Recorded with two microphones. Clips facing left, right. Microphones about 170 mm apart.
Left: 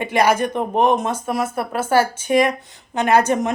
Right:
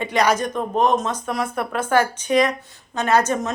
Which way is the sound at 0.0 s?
10° left (ahead or behind).